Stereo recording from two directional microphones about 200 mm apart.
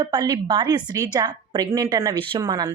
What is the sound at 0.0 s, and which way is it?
A woman's voice, 20° right (ahead or behind).